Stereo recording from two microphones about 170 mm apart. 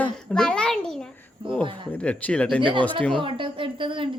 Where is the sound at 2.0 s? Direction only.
5° left (ahead or behind).